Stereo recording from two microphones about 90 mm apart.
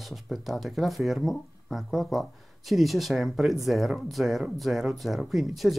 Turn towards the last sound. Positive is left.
turn(degrees=0)  # may be behind; listen again after turning